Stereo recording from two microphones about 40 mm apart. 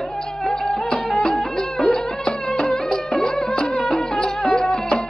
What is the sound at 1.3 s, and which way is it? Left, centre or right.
Music, centre.